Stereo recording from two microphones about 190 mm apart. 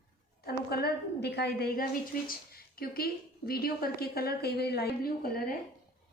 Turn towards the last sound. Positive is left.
turn(degrees=50)  # may be behind; listen again after turning